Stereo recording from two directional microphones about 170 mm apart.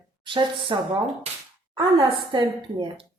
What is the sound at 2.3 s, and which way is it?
Speech, 30° right (ahead or behind).